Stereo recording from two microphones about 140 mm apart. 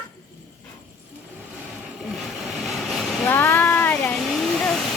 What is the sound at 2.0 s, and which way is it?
Vehicle, centre (ahead or behind).